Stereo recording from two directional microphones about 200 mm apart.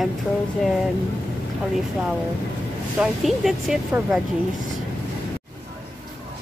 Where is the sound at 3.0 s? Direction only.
Centre (ahead or behind).